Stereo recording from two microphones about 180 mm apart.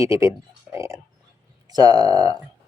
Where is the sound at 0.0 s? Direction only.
15° right (ahead or behind).